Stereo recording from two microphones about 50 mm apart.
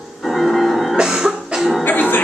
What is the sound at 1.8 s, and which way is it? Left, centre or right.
Music, left.